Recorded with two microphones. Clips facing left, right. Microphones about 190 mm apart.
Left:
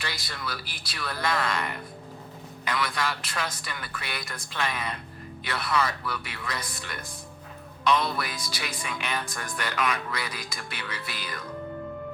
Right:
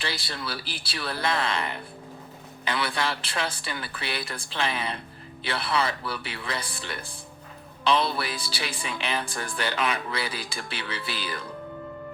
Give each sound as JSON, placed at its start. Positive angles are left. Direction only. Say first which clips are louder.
{"t": 0.0, "sound": "speech", "louder": "right 3 dB", "side_deg": -30}